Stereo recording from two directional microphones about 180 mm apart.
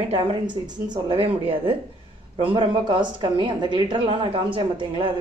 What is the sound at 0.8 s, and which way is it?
A woman's voice, 30° right (ahead or behind).